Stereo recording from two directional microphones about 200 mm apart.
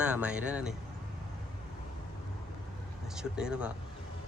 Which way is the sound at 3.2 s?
5° right (ahead or behind).